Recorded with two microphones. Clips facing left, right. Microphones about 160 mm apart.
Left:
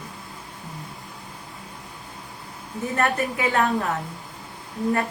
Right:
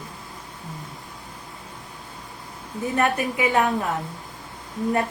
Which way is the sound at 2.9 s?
15° right (ahead or behind).